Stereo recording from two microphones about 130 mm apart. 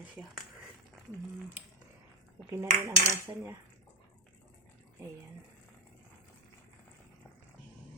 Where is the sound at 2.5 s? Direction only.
25° right (ahead or behind).